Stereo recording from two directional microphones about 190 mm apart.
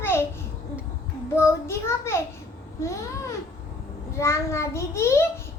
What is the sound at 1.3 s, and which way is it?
A child's voice, 15° left (ahead or behind).